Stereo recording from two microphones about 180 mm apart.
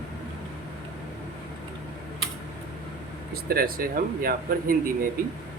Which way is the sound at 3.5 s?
55° right (ahead or behind).